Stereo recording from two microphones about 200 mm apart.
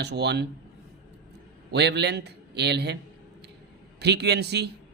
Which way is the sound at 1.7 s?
55° right (ahead or behind).